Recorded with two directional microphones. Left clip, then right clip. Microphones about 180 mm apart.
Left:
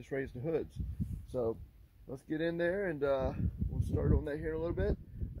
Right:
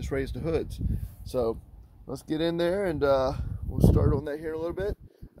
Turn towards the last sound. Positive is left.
turn(degrees=-10)  # may be behind; listen again after turning